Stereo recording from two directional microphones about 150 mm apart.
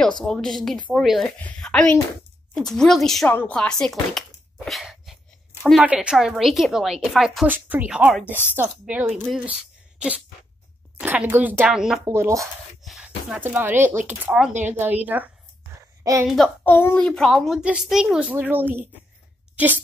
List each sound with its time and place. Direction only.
0.2 s a child's voice: 5° left (ahead or behind)
4.6 s cough: centre (ahead or behind)
5.7 s a child's voice: 5° right (ahead or behind)
7.4 s speech: 10° right (ahead or behind)
12.1 s speech: 20° right (ahead or behind)
12.8 s a sound: centre (ahead or behind)
13.4 s a woman's voice: 15° right (ahead or behind)
16.6 s a child's voice: 15° left (ahead or behind); by 18.9 s 10° right (ahead or behind)